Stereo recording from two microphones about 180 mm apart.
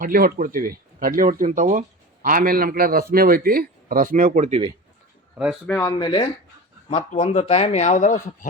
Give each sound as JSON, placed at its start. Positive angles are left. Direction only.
{"t": 0.0, "sound": "a man's voice", "side_deg": -50}
{"t": 5.6, "sound": "speech", "side_deg": 10}
{"t": 6.0, "sound": "speech", "side_deg": 25}
{"t": 6.9, "sound": "speech", "side_deg": 35}